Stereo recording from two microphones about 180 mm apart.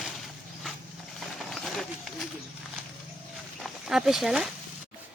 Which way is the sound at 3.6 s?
Centre (ahead or behind).